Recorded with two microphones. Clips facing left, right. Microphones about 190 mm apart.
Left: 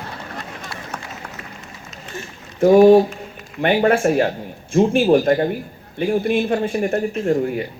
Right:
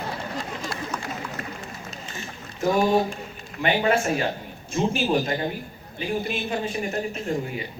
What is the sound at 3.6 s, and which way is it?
Speech, 55° left (ahead or behind).